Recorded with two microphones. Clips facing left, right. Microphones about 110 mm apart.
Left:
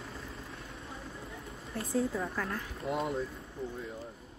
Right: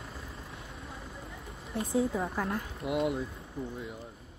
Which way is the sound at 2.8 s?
5° right (ahead or behind).